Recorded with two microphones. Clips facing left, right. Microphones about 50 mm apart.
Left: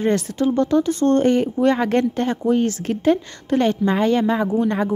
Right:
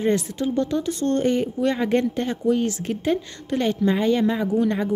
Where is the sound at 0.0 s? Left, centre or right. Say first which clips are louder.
Left 3 dB; left.